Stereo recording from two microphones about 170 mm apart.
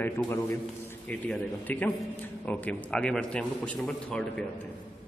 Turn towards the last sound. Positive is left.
turn(degrees=0)  # may be behind; listen again after turning